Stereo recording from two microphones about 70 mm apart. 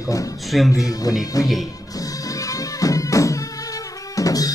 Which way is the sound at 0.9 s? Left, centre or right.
Left.